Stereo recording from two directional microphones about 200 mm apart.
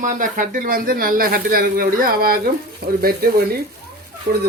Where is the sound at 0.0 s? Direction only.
40° right (ahead or behind).